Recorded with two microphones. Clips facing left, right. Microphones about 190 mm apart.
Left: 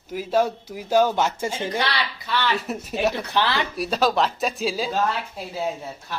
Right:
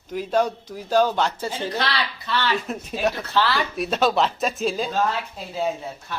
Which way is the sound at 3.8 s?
Centre (ahead or behind).